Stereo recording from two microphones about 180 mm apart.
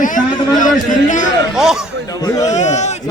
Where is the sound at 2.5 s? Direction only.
40° left (ahead or behind).